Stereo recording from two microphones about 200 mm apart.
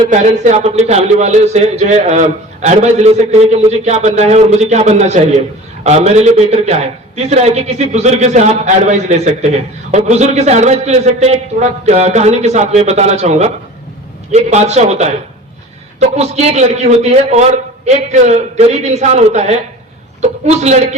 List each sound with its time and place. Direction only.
0.1 s a man's voice: 35° right (ahead or behind)